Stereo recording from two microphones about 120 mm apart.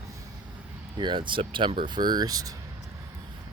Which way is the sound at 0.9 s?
40° right (ahead or behind).